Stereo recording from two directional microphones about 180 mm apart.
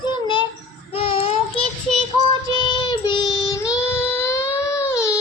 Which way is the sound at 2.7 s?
25° left (ahead or behind).